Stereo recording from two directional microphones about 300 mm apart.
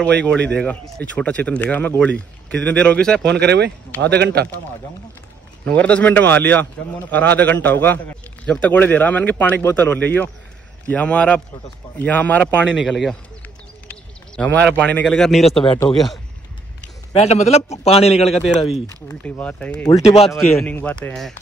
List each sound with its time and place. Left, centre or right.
0.0 s a man's voice: centre
3.3 s speech: right
5.7 s a man's voice: centre
14.3 s a man's voice: centre
15.6 s speech: centre
17.1 s a man's voice: left
18.3 s a man's voice: centre
20.0 s a man's voice: centre
20.6 s a man's voice: centre